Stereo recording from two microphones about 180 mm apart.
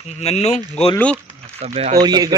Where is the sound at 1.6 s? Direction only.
35° right (ahead or behind).